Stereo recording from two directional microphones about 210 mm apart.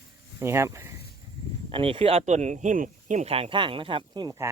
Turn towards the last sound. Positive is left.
turn(degrees=-20)  # may be behind; listen again after turning